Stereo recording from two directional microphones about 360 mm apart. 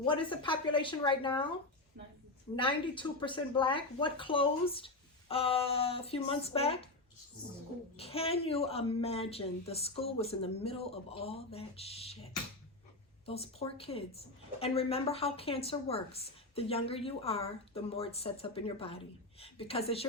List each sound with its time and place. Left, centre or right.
0.0 s a woman's voice: centre
2.6 s a woman's voice: centre
7.9 s a woman's voice: centre
13.2 s a woman's voice: centre